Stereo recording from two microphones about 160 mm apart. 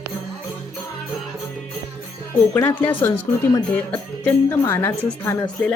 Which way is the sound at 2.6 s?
10° left (ahead or behind).